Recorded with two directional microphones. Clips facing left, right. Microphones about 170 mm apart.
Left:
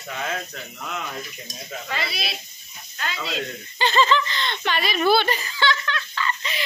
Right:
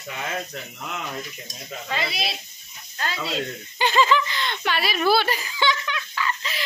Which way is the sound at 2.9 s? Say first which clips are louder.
Right 2 dB; 30° right (ahead or behind).